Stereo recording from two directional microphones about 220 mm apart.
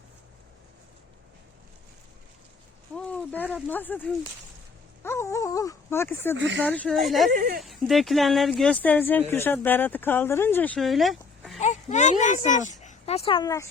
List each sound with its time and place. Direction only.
2.9 s a sound: 5° left (ahead or behind)
3.5 s speech: 10° left (ahead or behind)
6.3 s speech: 55° right (ahead or behind)
6.6 s speech: 5° left (ahead or behind)
7.3 s speech: 40° right (ahead or behind)
7.6 s speech: centre (ahead or behind)
11.6 s speech: 35° left (ahead or behind); by 13.7 s 15° left (ahead or behind)